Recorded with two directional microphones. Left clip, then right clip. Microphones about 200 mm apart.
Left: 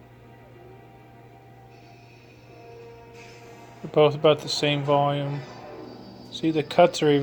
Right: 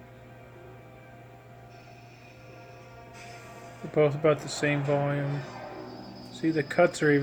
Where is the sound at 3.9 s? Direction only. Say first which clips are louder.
Left 5 dB; 10° left (ahead or behind).